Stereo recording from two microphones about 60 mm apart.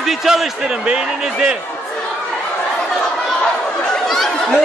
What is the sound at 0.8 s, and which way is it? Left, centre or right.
Speech, centre.